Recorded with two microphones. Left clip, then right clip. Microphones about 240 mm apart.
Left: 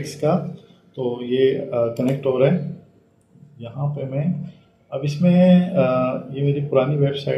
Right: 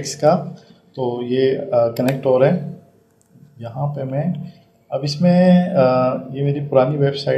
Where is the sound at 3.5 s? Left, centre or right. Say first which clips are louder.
Right 4 dB; right.